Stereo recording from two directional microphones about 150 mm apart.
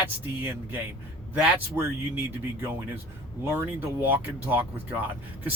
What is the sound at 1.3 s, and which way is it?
Speech, 15° right (ahead or behind).